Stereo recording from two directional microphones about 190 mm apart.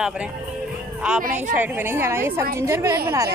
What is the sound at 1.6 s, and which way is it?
A woman's voice, 10° right (ahead or behind).